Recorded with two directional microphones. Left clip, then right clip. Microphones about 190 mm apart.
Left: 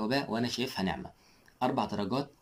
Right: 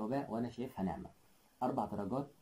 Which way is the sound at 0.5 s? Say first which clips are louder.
Left 9 dB; 5° left (ahead or behind).